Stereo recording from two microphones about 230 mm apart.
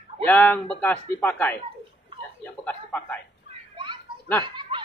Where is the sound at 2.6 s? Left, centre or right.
Centre.